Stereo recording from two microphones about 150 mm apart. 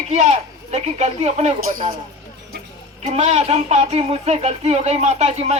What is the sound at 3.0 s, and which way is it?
Speech, 45° right (ahead or behind).